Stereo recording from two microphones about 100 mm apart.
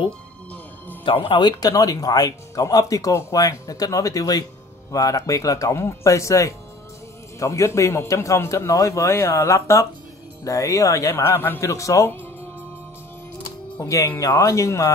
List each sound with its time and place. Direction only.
1.0 s speech: 60° left (ahead or behind)
1.6 s speech: 35° left (ahead or behind)
13.7 s speech: 30° left (ahead or behind)